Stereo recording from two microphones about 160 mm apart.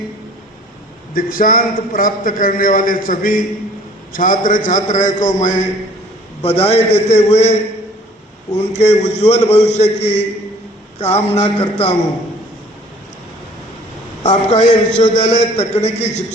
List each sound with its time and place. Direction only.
1.1 s a man's voice: 60° left (ahead or behind); by 7.5 s 45° left (ahead or behind)
8.5 s a man's voice: 45° left (ahead or behind)
11.3 s a man's voice: 40° left (ahead or behind)
14.3 s a man's voice: 45° left (ahead or behind)